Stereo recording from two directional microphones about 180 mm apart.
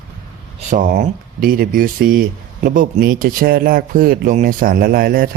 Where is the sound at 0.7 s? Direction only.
50° right (ahead or behind).